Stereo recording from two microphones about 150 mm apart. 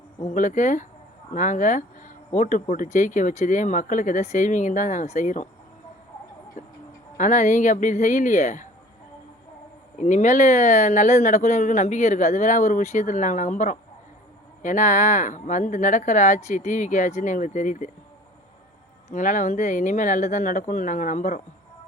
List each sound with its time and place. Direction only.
0.3 s speech: 55° left (ahead or behind)
7.2 s speech: 55° left (ahead or behind)
10.0 s speech: 55° left (ahead or behind)
19.1 s speech: 55° left (ahead or behind)